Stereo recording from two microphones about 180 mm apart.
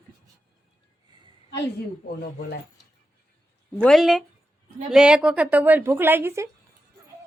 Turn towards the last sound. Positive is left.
turn(degrees=-15)  # may be behind; listen again after turning